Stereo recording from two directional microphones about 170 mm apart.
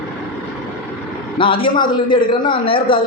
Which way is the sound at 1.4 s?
30° left (ahead or behind).